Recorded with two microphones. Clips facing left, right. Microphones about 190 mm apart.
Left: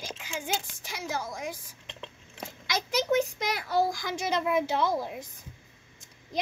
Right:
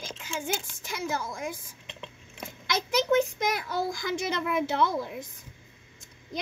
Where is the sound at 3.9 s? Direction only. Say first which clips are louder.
Even; 55° right (ahead or behind).